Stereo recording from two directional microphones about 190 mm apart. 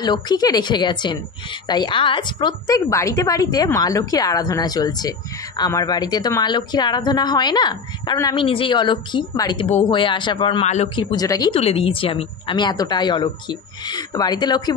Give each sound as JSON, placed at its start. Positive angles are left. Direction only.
{"t": 0.0, "sound": "a woman's voice", "side_deg": 20}